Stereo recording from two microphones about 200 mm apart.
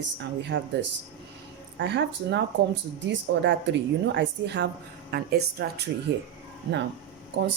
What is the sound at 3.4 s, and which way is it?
A woman's voice, 65° right (ahead or behind).